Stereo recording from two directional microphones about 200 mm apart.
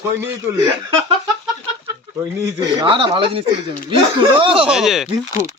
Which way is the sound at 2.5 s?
25° right (ahead or behind).